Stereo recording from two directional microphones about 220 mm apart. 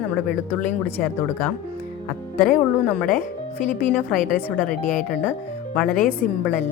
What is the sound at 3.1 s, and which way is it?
Speech, 40° left (ahead or behind).